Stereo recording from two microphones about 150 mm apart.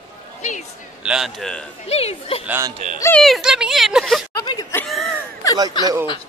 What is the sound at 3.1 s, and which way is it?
Speech, centre (ahead or behind).